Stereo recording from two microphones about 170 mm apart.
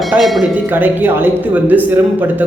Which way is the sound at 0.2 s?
Centre (ahead or behind).